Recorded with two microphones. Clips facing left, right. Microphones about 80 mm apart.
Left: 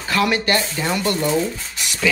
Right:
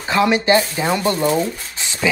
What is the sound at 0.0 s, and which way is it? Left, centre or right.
Speech, right.